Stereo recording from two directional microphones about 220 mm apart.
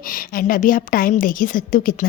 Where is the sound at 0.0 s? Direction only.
40° left (ahead or behind).